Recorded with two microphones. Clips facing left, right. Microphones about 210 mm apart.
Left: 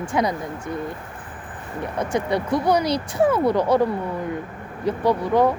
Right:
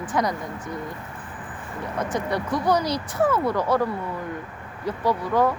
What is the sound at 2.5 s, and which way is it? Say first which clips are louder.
Speech: left 3 dB; 10° left (ahead or behind).